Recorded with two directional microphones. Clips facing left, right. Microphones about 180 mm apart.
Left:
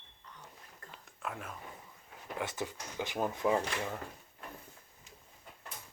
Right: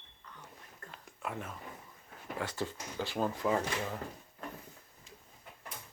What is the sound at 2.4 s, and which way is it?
Speech, 20° left (ahead or behind).